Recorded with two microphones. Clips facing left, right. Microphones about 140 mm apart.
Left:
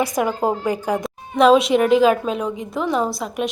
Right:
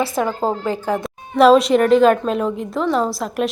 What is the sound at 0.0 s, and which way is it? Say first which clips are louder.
Speech: even; 15° left (ahead or behind).